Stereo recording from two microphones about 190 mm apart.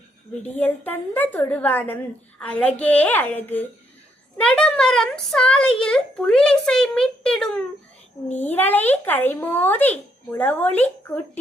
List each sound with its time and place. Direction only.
0.4 s a woman's voice: 10° left (ahead or behind)